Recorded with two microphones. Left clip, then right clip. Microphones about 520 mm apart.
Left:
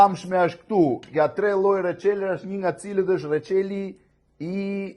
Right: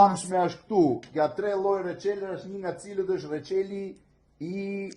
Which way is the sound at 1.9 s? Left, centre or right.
Left.